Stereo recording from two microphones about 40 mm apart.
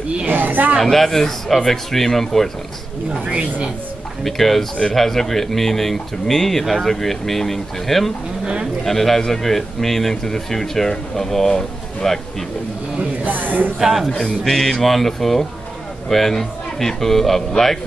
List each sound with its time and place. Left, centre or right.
0.3 s speech: right
0.7 s speech: centre
4.2 s speech: centre
13.2 s speech: right
13.7 s speech: centre